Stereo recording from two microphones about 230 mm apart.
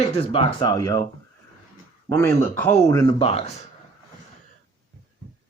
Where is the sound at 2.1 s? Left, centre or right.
Centre; by 3.6 s left.